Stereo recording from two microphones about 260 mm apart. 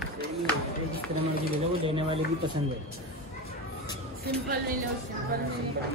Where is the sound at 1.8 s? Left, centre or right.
Right.